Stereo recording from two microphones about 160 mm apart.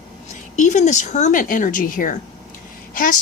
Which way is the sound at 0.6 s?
50° left (ahead or behind).